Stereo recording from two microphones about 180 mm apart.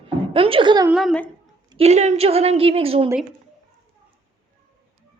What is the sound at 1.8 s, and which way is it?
A woman's voice, 40° right (ahead or behind).